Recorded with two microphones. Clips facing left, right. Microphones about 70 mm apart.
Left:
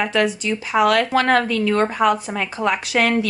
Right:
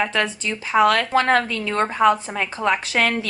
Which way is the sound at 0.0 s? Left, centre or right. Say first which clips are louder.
Left 3 dB; right.